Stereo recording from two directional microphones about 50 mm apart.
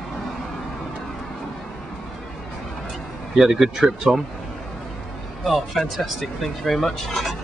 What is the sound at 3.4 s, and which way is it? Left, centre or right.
Speech, centre.